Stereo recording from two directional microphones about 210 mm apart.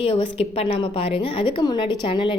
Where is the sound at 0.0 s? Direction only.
25° left (ahead or behind).